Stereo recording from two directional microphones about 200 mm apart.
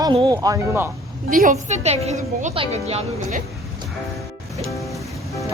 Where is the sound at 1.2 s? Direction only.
45° right (ahead or behind).